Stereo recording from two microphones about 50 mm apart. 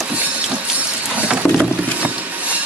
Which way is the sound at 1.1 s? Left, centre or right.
Right.